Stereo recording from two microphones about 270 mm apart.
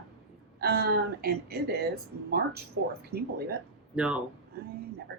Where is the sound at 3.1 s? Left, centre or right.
Right.